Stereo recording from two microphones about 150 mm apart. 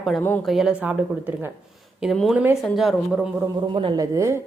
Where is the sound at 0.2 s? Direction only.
10° left (ahead or behind).